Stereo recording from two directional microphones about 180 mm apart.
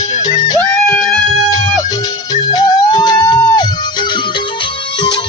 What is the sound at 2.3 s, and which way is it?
Music, 25° left (ahead or behind).